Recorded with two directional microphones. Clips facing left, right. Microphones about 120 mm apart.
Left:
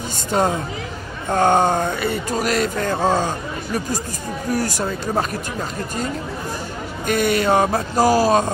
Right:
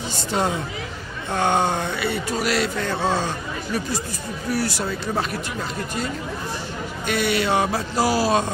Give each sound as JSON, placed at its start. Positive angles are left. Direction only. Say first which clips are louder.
{"t": 0.3, "sound": "speech", "louder": "left 4 dB", "side_deg": 45}
{"t": 7.1, "sound": "speech", "louder": "left 4 dB", "side_deg": 45}